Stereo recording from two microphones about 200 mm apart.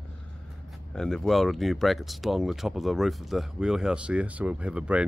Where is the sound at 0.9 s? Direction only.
Centre (ahead or behind).